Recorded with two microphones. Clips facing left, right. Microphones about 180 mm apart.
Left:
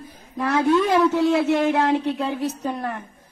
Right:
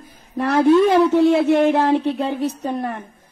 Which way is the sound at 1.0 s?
30° right (ahead or behind).